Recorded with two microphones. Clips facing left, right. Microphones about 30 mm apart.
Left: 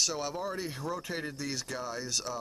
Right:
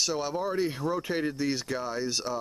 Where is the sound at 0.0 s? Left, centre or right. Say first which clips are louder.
Right 4 dB; centre.